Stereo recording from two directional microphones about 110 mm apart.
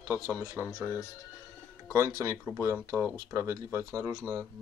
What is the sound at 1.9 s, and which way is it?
Speech, 25° right (ahead or behind).